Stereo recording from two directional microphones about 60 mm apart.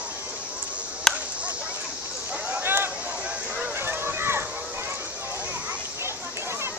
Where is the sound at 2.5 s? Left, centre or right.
Right.